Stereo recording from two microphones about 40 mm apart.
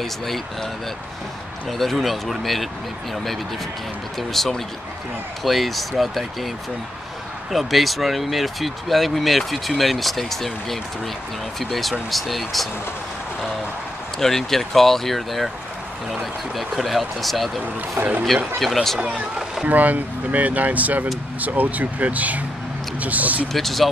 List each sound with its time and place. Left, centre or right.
1.7 s speech: centre
4.2 s speech: centre
7.5 s speech: centre
14.2 s speech: centre
18.6 s speech: centre
19.7 s speech: right
23.5 s speech: centre